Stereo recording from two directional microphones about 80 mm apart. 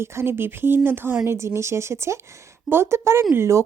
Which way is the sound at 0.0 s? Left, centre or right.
Right.